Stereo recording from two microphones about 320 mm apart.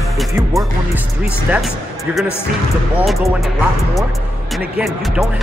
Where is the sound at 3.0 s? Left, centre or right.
Centre.